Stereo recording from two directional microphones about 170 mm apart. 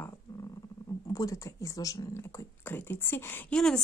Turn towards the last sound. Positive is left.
turn(degrees=5)  # may be behind; listen again after turning